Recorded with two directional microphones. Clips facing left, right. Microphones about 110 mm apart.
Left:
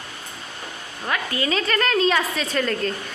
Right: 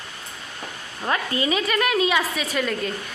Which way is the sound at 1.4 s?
10° right (ahead or behind).